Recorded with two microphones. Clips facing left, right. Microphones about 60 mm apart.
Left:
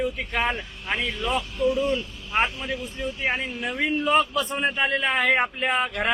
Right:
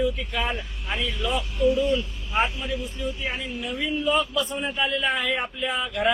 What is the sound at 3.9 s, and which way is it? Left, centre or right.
A man's voice, left.